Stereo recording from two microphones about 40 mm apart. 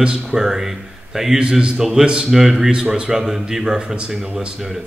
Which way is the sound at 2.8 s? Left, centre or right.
Right.